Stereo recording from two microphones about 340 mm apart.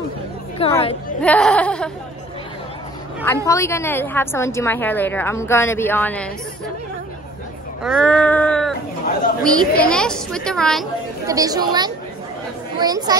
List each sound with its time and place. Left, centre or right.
0.6 s a woman's voice: centre
1.2 s a woman's voice: centre
3.4 s a woman's voice: centre
7.8 s a woman's voice: centre
11.2 s speech: centre